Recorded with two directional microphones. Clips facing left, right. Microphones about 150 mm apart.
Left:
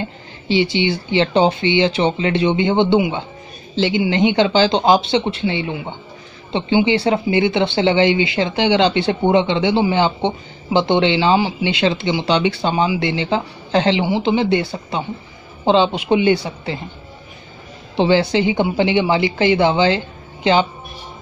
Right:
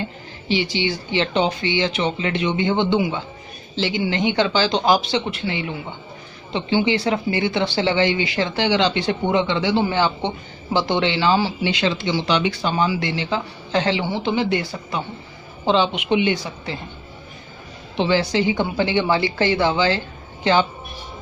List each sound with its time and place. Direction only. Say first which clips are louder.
0.5 s speech: left 5 dB; 25° left (ahead or behind)
17.9 s speech: left 4 dB; 30° left (ahead or behind)